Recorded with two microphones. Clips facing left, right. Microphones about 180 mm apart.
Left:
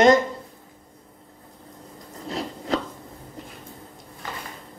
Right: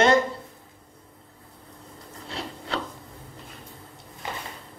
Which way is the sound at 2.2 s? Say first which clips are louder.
Left 7 dB; 40° left (ahead or behind).